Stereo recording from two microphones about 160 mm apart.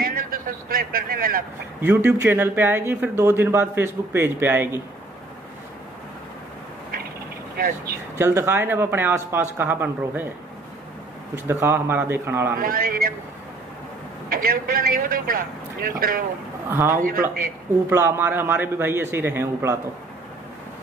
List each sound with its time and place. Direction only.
0.0 s a man's voice: 65° right (ahead or behind)
1.8 s speech: 15° right (ahead or behind)
7.5 s a man's voice: 65° right (ahead or behind)
8.2 s speech: 15° right (ahead or behind)
11.3 s speech: 15° right (ahead or behind)
12.5 s a man's voice: 65° right (ahead or behind)
14.3 s a man's voice: 65° right (ahead or behind)
16.6 s speech: 15° right (ahead or behind)
16.9 s a man's voice: 65° right (ahead or behind)
17.8 s speech: 15° right (ahead or behind)